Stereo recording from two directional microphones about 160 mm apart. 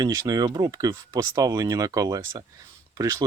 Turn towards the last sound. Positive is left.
turn(degrees=-20)  # may be behind; listen again after turning